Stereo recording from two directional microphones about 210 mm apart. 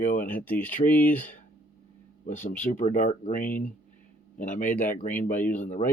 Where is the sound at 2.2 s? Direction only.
35° left (ahead or behind).